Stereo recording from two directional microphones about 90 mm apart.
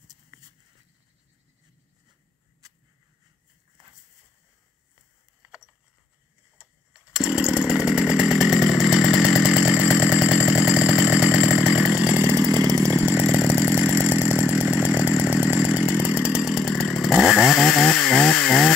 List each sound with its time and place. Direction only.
6.6 s chainsaw: 5° right (ahead or behind)
12.4 s chainsaw: 40° right (ahead or behind)
12.9 s chainsaw: 20° right (ahead or behind)
16.5 s chainsaw: 5° left (ahead or behind)